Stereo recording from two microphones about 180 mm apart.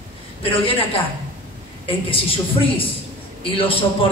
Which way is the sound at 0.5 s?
30° left (ahead or behind).